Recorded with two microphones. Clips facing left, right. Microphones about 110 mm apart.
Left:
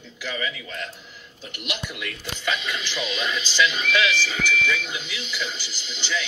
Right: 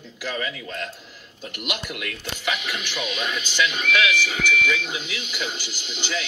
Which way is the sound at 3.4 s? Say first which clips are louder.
Left 3 dB; 50° right (ahead or behind).